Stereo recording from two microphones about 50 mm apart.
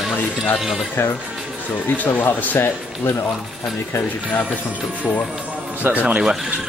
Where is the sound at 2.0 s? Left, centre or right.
Left.